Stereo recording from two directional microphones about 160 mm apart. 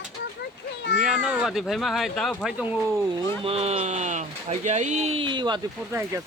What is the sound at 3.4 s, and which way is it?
Speech, 40° right (ahead or behind).